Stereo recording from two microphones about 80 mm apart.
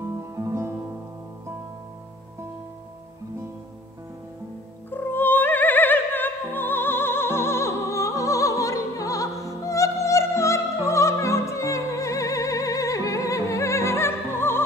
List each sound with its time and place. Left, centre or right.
0.0 s music: right
4.9 s opera: left
9.7 s music: left